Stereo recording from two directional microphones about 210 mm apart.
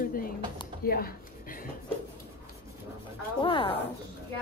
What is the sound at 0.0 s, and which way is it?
A woman's voice, 45° left (ahead or behind).